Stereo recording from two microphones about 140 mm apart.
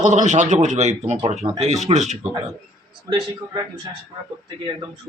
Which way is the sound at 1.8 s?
55° right (ahead or behind).